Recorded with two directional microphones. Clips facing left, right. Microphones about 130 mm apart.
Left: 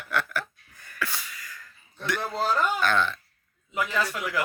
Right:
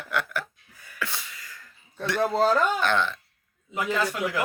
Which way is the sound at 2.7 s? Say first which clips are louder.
Even; 20° right (ahead or behind).